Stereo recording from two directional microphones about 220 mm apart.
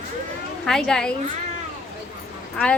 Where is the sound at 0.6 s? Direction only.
Centre (ahead or behind).